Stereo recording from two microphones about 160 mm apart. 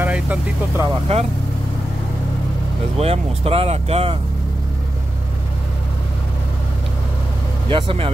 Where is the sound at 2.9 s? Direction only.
40° right (ahead or behind).